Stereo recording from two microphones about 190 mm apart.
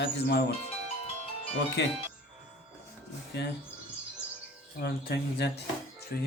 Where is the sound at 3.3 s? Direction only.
60° left (ahead or behind).